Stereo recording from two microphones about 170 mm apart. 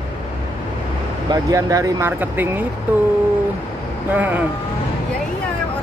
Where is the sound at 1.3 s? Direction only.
20° right (ahead or behind).